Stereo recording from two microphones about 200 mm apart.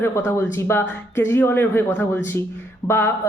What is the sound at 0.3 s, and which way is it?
Speech, 10° left (ahead or behind).